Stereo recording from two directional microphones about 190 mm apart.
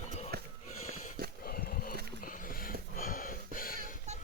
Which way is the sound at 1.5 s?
50° left (ahead or behind).